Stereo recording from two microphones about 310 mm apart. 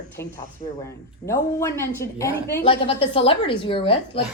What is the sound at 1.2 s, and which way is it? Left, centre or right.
A woman's voice, centre.